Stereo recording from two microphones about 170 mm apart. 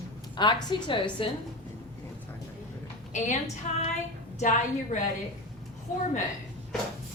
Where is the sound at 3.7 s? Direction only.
45° left (ahead or behind).